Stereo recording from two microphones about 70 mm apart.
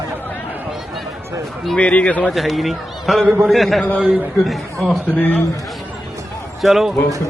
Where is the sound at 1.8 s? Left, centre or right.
Centre.